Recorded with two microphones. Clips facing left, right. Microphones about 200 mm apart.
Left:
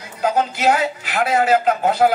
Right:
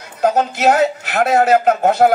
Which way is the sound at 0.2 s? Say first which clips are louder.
Right 4 dB; 45° right (ahead or behind).